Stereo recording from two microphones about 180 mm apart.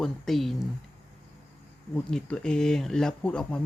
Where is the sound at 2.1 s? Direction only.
5° left (ahead or behind).